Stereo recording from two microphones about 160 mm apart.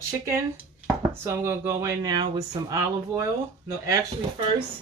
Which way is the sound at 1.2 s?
15° right (ahead or behind).